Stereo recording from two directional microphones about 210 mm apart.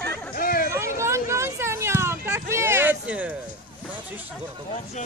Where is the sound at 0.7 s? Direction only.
15° right (ahead or behind).